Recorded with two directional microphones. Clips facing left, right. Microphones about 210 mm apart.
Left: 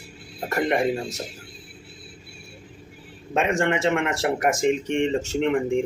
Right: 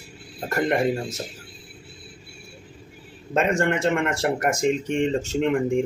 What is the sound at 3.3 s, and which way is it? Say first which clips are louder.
Speech: right 1 dB; centre (ahead or behind).